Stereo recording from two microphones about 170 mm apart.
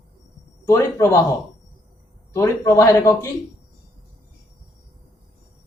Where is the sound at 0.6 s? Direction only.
15° left (ahead or behind).